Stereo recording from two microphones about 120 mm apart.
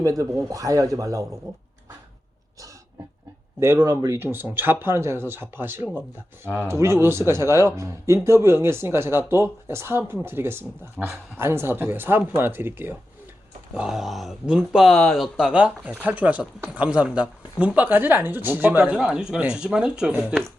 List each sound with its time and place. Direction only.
0.0 s speech: 25° right (ahead or behind)
3.6 s speech: 20° right (ahead or behind)
13.7 s speech: 5° right (ahead or behind)